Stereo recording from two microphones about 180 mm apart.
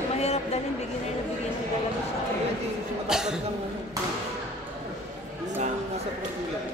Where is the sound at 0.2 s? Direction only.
35° left (ahead or behind).